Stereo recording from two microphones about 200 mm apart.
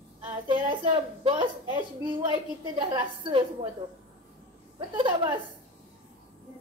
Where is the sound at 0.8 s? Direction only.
25° right (ahead or behind).